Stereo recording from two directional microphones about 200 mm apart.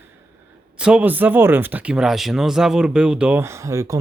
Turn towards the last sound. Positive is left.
turn(degrees=-15)  # may be behind; listen again after turning